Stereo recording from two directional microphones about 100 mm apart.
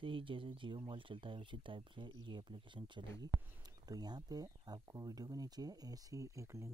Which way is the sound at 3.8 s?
40° right (ahead or behind).